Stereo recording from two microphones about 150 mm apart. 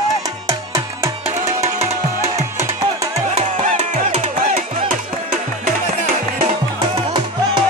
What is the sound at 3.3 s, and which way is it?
Music, 50° right (ahead or behind).